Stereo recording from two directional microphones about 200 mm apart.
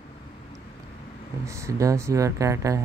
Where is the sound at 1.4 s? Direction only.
15° right (ahead or behind).